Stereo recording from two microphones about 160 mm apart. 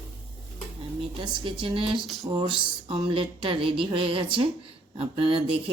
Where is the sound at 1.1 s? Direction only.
35° right (ahead or behind).